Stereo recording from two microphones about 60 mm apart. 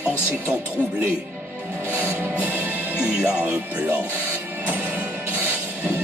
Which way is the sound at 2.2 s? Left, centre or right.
Right.